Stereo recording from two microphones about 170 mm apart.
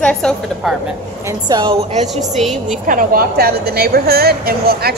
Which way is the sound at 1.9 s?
40° right (ahead or behind).